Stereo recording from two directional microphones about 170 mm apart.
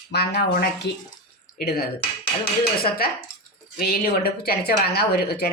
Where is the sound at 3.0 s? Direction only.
65° left (ahead or behind).